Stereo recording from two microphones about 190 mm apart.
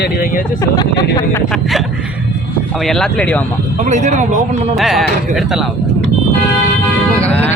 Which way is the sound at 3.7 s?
40° right (ahead or behind).